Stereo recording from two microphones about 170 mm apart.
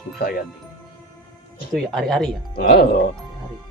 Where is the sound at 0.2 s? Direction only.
60° left (ahead or behind).